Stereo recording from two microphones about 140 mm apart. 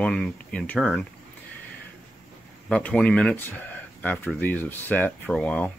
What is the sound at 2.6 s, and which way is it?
Speech, 5° left (ahead or behind).